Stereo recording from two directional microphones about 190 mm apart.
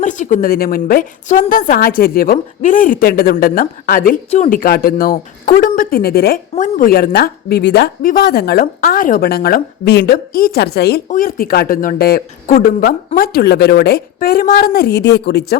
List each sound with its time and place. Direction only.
0.0 s speech: 40° left (ahead or behind); by 11.0 s 60° left (ahead or behind)
11.1 s speech: 50° left (ahead or behind)